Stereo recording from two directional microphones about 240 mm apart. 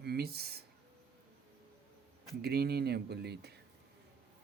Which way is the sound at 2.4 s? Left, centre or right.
Right.